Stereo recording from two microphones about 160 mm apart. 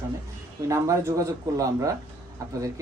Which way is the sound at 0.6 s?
20° right (ahead or behind).